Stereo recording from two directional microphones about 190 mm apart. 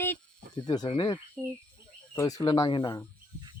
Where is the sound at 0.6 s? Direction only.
20° left (ahead or behind).